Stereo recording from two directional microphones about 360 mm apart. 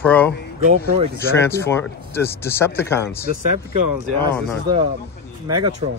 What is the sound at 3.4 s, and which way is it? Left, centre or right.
Speech, right.